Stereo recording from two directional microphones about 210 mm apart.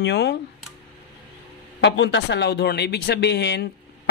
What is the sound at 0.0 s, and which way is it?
Speech, 55° left (ahead or behind).